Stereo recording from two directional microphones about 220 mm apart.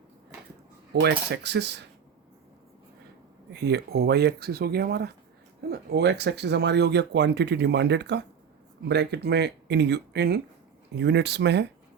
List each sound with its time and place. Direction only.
1.0 s speech: 50° right (ahead or behind)
3.5 s speech: 50° right (ahead or behind)